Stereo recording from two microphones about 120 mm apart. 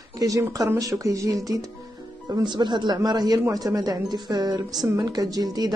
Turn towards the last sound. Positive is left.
turn(degrees=-35)  # may be behind; listen again after turning